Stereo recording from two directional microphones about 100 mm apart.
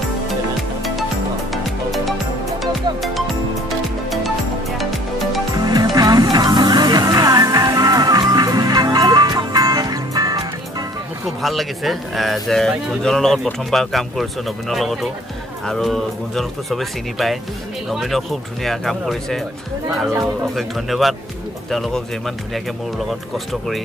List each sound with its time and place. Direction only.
1.5 s music: centre (ahead or behind)
5.6 s music: 40° right (ahead or behind)
11.4 s speech: centre (ahead or behind)
20.5 s speech: centre (ahead or behind)